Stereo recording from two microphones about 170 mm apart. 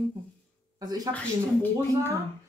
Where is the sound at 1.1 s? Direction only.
10° left (ahead or behind).